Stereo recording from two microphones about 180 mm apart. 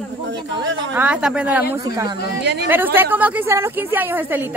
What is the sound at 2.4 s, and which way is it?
Speech, 65° right (ahead or behind).